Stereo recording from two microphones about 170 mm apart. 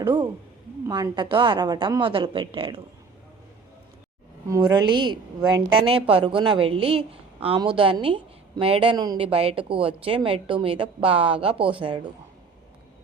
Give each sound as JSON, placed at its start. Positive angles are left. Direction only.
{"t": 0.0, "sound": "a sound", "side_deg": -30}
{"t": 0.9, "sound": "a woman's voice", "side_deg": -20}
{"t": 4.4, "sound": "a woman's voice", "side_deg": -20}